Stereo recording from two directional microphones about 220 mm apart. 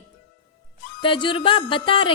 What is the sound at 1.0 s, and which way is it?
A woman's voice, 20° left (ahead or behind).